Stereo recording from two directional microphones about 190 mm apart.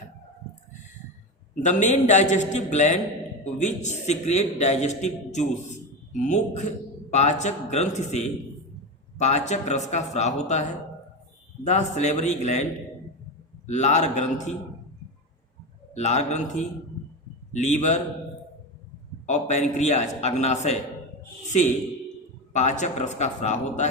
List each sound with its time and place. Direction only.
1.6 s a man's voice: 40° left (ahead or behind)
11.6 s a man's voice: 40° left (ahead or behind)
13.7 s a man's voice: 40° left (ahead or behind)
16.0 s a man's voice: 35° left (ahead or behind)
19.2 s a man's voice: 35° left (ahead or behind)
22.5 s a man's voice: 40° left (ahead or behind)